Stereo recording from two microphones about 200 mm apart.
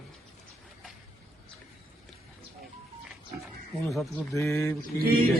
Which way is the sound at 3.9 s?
Centre (ahead or behind).